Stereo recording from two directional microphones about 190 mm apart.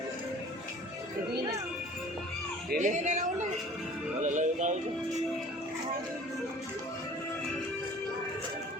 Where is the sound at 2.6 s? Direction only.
40° right (ahead or behind).